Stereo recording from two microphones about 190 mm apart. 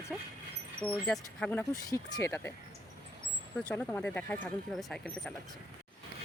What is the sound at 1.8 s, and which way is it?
Speech, 15° left (ahead or behind).